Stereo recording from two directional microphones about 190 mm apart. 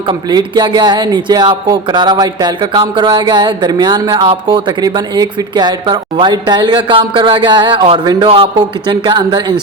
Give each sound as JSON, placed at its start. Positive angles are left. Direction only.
{"t": 0.1, "sound": "a man's voice", "side_deg": -20}